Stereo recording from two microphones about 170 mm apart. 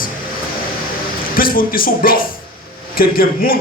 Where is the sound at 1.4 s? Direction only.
55° left (ahead or behind).